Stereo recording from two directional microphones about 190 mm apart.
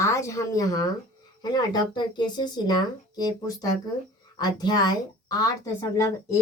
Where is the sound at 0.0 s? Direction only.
15° left (ahead or behind).